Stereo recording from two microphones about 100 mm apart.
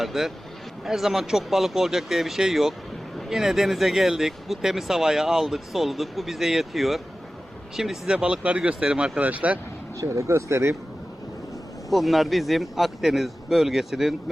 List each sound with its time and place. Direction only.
0.0 s speech: centre (ahead or behind)
10.0 s speech: 30° right (ahead or behind)
11.9 s speech: centre (ahead or behind)